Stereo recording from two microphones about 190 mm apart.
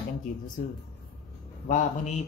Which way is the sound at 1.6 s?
40° left (ahead or behind).